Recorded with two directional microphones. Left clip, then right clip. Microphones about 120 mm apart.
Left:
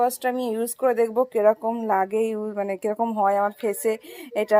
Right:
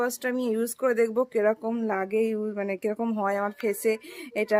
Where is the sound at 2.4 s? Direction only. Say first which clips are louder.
Left 3 dB; 30° right (ahead or behind).